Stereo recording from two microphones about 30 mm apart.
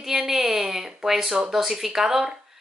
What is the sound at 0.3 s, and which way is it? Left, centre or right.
Speech, centre.